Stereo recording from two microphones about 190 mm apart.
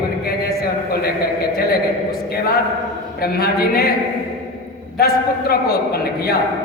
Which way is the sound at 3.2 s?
55° left (ahead or behind).